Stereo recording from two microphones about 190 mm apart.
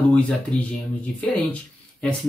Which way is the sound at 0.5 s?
25° right (ahead or behind).